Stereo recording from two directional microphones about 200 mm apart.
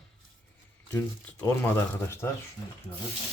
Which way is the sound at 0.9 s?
10° left (ahead or behind).